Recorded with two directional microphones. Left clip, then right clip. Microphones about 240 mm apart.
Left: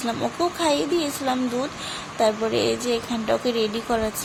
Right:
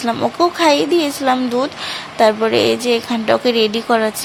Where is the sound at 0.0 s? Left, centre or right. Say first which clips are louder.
Right 9 dB; centre.